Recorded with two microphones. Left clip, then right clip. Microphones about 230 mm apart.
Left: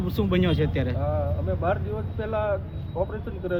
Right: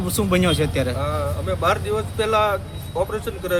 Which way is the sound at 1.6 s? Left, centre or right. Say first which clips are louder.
Right 9 dB; right.